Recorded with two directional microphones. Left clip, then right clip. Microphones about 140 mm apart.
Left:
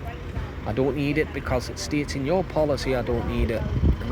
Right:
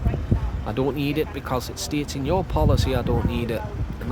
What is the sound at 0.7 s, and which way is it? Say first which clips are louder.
Speech: even; 20° right (ahead or behind).